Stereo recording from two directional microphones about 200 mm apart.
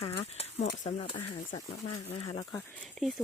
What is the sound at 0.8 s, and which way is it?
Speech, 30° left (ahead or behind).